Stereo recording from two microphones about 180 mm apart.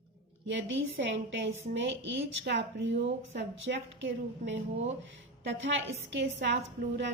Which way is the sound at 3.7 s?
65° right (ahead or behind).